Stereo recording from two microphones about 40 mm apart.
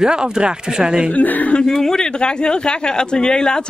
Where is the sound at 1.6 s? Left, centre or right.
Centre.